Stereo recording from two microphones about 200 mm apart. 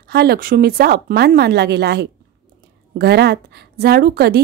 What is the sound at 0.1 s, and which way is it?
A woman's voice, 50° right (ahead or behind).